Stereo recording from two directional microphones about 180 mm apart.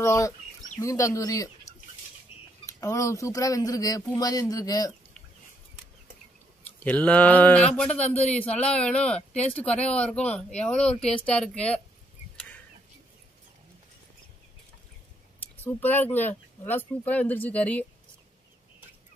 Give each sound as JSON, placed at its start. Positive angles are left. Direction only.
{"t": 0.0, "sound": "speech", "side_deg": 15}
{"t": 2.3, "sound": "cutlery", "side_deg": 30}
{"t": 2.6, "sound": "speech", "side_deg": 15}
{"t": 6.8, "sound": "a woman's voice", "side_deg": 10}
{"t": 12.4, "sound": "a sound", "side_deg": 10}
{"t": 15.6, "sound": "speech", "side_deg": 10}